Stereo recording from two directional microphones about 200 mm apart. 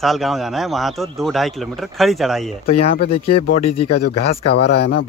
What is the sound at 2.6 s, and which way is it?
Speech, 30° left (ahead or behind).